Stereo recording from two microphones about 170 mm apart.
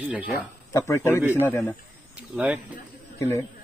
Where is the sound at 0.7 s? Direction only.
20° left (ahead or behind).